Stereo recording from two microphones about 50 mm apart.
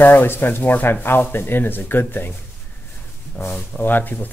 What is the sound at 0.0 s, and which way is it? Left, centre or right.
Speech, left.